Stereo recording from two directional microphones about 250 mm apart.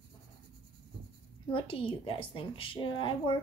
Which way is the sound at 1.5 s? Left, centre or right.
Left.